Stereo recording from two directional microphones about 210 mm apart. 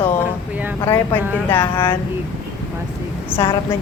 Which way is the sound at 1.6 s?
25° left (ahead or behind).